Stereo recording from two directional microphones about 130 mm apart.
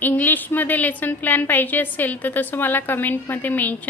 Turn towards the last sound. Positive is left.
turn(degrees=15)  # may be behind; listen again after turning